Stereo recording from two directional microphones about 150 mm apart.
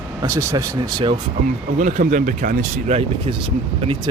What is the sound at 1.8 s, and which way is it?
Speech, 60° right (ahead or behind).